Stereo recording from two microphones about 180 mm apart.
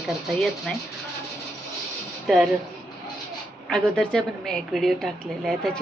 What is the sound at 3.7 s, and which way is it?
A woman's voice, 5° left (ahead or behind).